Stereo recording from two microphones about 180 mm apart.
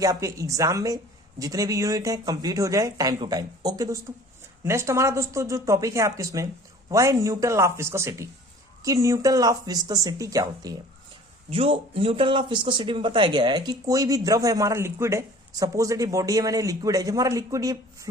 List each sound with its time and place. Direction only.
0.0 s speech: 20° right (ahead or behind)
11.5 s speech: 30° right (ahead or behind)